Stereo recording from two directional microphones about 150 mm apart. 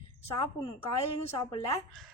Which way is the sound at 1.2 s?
45° left (ahead or behind).